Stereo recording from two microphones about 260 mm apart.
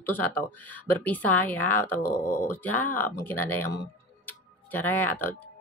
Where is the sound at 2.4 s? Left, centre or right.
Centre.